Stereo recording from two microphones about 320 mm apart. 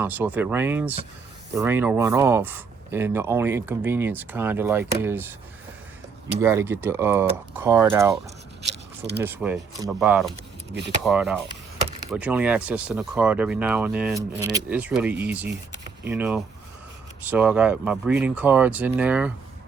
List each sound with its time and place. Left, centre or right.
0.0 s speech: centre
6.4 s speech: centre
8.6 s a sound: right
9.2 s speech: centre